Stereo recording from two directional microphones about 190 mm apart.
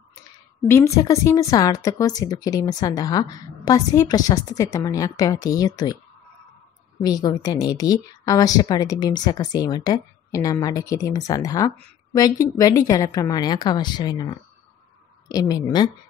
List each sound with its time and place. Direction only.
0.7 s a woman's voice: 15° left (ahead or behind)
7.0 s a woman's voice: 20° left (ahead or behind)